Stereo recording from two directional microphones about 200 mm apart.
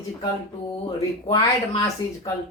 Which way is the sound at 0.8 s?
25° left (ahead or behind).